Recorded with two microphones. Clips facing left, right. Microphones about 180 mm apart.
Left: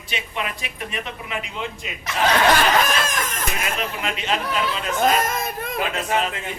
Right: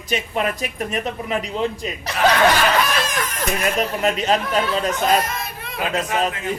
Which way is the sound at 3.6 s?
40° right (ahead or behind).